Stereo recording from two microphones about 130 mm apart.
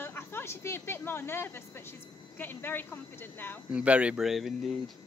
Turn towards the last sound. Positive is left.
turn(degrees=0)  # may be behind; listen again after turning